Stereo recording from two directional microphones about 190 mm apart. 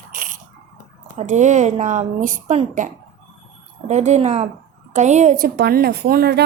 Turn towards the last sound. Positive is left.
turn(degrees=-55)  # may be behind; listen again after turning